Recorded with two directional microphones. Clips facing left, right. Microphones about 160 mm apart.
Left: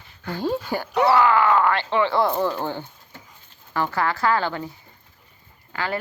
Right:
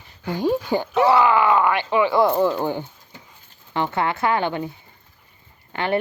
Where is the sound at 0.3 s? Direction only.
15° right (ahead or behind).